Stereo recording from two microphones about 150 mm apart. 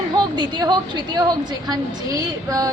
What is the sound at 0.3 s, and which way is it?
A woman's voice, 30° right (ahead or behind).